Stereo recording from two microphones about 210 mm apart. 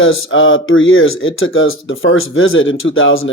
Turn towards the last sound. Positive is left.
turn(degrees=70)  # may be behind; listen again after turning